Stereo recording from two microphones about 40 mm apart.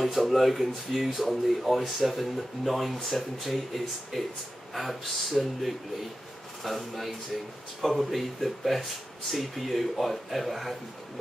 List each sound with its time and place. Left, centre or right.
0.0 s speech: centre